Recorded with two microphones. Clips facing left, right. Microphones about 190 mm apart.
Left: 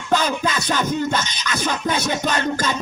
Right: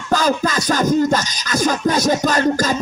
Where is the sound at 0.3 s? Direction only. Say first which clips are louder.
Right 5 dB; 35° right (ahead or behind).